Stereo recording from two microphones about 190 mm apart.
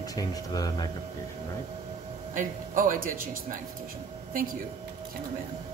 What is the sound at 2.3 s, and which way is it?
Speech, 45° right (ahead or behind).